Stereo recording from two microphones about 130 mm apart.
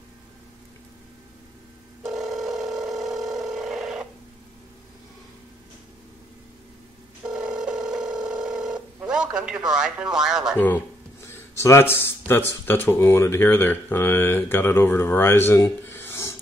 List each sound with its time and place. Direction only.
2.0 s telephone: centre (ahead or behind)
7.2 s telephone: 5° right (ahead or behind)
9.0 s speech: 5° right (ahead or behind)
11.5 s speech: 20° left (ahead or behind)